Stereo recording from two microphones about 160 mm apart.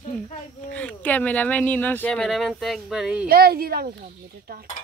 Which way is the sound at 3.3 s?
70° right (ahead or behind).